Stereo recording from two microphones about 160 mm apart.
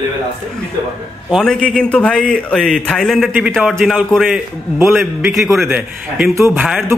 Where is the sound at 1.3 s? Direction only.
5° left (ahead or behind).